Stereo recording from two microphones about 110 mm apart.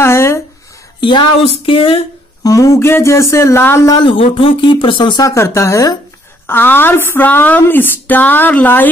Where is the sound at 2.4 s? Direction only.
30° left (ahead or behind).